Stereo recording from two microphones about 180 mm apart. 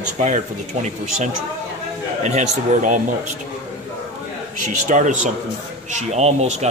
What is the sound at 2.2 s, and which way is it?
Speech, 40° right (ahead or behind).